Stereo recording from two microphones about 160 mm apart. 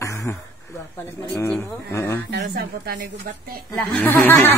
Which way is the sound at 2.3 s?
75° right (ahead or behind).